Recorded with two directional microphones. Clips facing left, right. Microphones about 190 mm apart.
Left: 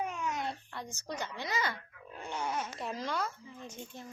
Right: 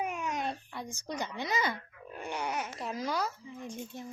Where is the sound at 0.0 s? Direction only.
15° right (ahead or behind).